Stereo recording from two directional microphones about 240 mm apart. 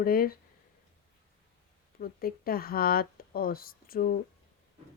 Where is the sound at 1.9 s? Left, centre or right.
Left.